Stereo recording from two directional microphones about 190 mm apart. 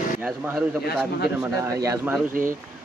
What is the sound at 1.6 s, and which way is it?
Speech, 15° right (ahead or behind).